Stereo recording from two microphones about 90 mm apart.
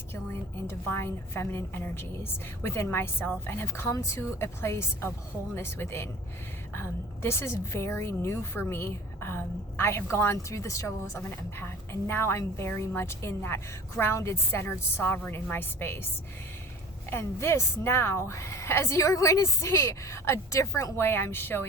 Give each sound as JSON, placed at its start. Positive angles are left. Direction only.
{"t": 0.9, "sound": "a woman's voice", "side_deg": 25}
{"t": 17.1, "sound": "speech", "side_deg": 30}